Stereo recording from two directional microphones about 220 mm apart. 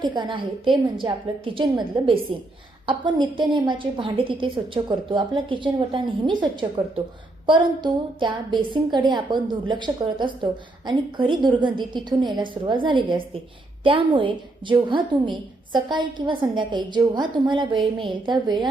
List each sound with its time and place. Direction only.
0.0 s a woman's voice: 20° right (ahead or behind)